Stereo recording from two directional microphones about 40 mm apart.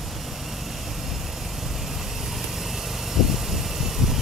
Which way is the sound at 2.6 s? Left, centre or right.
Centre.